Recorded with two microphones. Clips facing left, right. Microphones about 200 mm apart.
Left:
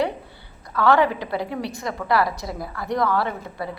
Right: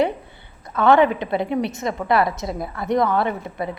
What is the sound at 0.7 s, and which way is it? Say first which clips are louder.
A woman's voice: right 3 dB; 20° right (ahead or behind).